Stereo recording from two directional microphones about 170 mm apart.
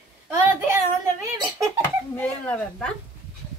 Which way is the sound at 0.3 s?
15° right (ahead or behind).